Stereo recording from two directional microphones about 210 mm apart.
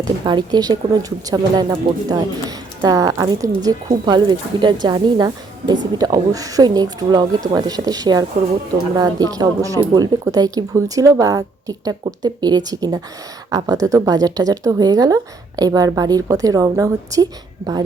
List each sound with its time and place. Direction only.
0.3 s speech: 20° right (ahead or behind)